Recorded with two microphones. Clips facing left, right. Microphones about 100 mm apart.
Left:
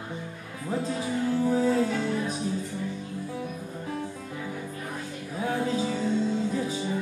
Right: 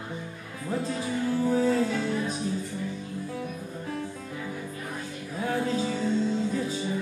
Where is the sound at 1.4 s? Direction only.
15° left (ahead or behind).